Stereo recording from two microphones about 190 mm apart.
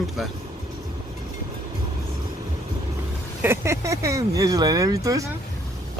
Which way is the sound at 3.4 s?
15° right (ahead or behind).